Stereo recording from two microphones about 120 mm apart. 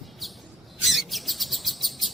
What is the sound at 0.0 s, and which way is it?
Chirp, centre (ahead or behind).